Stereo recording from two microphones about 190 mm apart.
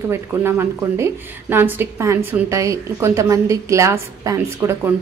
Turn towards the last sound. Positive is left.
turn(degrees=-15)  # may be behind; listen again after turning